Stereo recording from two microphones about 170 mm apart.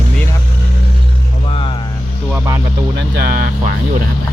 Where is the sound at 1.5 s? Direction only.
30° left (ahead or behind).